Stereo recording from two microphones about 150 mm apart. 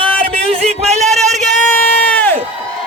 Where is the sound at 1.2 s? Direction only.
50° right (ahead or behind).